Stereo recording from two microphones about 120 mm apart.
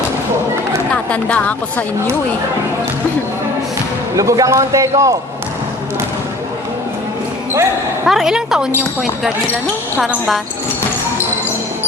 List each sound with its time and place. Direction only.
1.1 s speech: 10° left (ahead or behind)
4.1 s speech: 25° right (ahead or behind)
8.0 s a woman's voice: 5° right (ahead or behind)
10.0 s a woman's voice: centre (ahead or behind)